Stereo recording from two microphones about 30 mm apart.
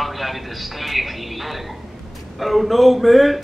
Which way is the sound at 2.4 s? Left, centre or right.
Centre.